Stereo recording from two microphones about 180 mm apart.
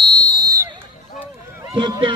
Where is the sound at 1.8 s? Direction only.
25° right (ahead or behind).